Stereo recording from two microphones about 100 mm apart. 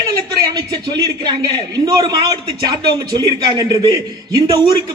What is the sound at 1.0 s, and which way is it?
A man's voice, 45° right (ahead or behind).